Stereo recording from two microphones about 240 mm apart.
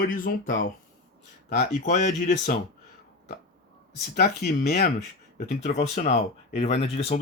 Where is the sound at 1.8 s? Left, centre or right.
Left.